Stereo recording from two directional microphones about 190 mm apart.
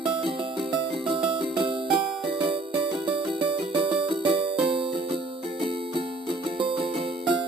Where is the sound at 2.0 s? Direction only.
Centre (ahead or behind).